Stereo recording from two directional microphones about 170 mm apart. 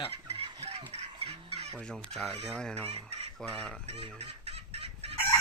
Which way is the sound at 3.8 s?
35° right (ahead or behind).